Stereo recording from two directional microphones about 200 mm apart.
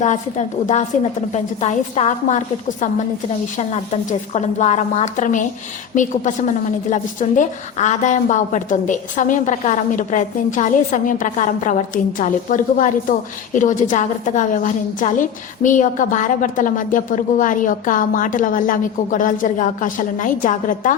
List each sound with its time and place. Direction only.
0.0 s a woman's voice: 35° left (ahead or behind)
4.3 s a woman's voice: 35° left (ahead or behind)